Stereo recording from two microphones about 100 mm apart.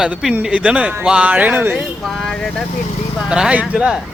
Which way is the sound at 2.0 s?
5° left (ahead or behind).